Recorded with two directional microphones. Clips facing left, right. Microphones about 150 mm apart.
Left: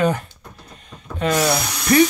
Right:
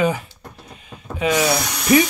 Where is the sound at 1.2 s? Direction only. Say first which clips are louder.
Even; 5° right (ahead or behind).